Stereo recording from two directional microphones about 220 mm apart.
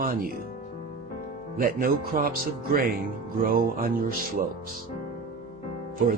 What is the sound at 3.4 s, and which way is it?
Speech, 40° right (ahead or behind).